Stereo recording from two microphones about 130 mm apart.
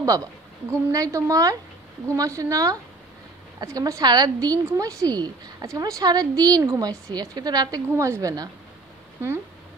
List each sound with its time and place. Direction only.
0.0 s a woman's voice: 25° right (ahead or behind)